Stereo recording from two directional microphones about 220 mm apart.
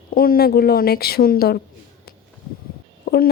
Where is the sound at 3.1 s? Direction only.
45° left (ahead or behind).